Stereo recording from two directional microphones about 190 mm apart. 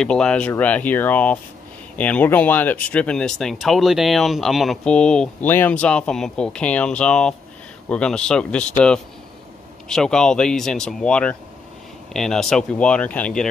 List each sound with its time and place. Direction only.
0.0 s speech: 5° left (ahead or behind)
9.8 s speech: 5° left (ahead or behind)